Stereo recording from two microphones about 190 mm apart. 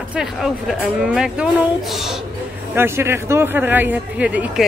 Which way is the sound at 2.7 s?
10° right (ahead or behind).